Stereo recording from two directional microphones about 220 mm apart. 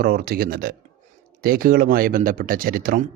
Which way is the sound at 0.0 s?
45° right (ahead or behind).